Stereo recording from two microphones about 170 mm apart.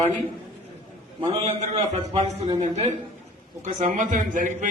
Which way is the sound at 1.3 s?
35° right (ahead or behind).